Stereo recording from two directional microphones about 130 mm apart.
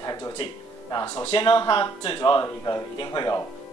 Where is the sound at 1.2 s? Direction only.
45° left (ahead or behind).